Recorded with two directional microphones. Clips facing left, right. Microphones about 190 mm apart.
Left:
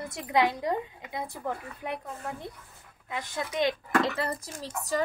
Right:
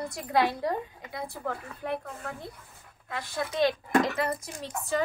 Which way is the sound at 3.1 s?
20° left (ahead or behind).